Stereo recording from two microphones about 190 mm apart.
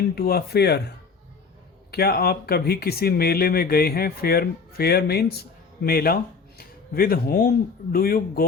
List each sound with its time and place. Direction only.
0.2 s speech: 55° left (ahead or behind)